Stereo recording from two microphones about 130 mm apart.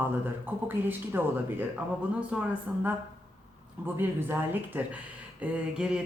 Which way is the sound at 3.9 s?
15° right (ahead or behind).